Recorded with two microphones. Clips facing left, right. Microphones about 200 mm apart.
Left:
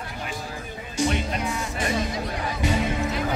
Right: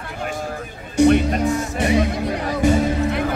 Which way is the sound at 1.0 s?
60° right (ahead or behind).